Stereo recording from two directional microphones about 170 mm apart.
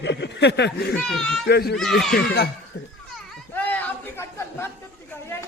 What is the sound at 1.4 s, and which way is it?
Speech, 70° left (ahead or behind).